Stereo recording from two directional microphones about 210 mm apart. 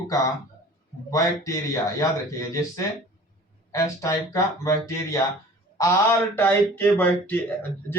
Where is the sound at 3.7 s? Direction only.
15° left (ahead or behind).